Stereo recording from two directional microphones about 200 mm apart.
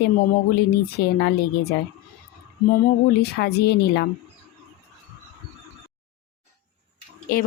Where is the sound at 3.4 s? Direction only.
55° left (ahead or behind).